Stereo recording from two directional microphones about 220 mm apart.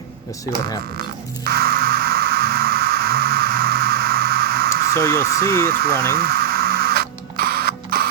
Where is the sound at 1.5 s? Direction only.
45° right (ahead or behind).